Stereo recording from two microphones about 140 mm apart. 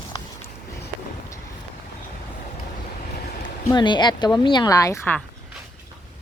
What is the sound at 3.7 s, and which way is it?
Speech, 35° left (ahead or behind).